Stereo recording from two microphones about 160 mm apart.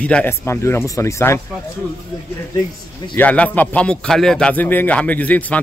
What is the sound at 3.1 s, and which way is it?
Speech, 10° left (ahead or behind).